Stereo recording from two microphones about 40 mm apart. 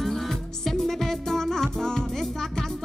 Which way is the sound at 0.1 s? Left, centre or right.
Centre.